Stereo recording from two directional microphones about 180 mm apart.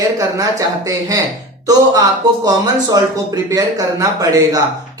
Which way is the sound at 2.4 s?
20° right (ahead or behind).